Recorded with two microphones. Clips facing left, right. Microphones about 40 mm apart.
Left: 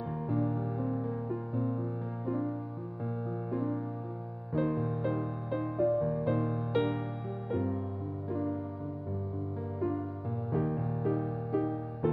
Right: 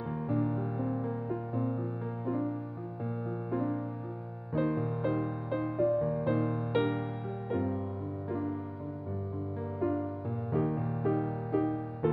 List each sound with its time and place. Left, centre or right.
0.3 s music: centre
8.3 s music: centre
9.6 s music: centre